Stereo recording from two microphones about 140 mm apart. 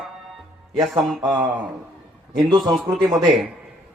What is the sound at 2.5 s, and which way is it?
Speech, 30° right (ahead or behind).